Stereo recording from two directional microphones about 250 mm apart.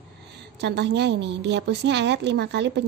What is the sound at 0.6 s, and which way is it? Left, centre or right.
Speech, right.